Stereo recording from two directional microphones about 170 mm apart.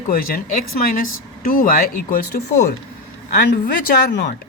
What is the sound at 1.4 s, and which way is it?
Speech, 55° left (ahead or behind).